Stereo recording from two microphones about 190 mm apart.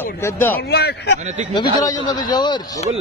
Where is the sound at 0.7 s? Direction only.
55° left (ahead or behind).